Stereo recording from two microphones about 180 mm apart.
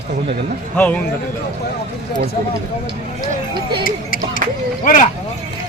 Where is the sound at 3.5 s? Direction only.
25° right (ahead or behind).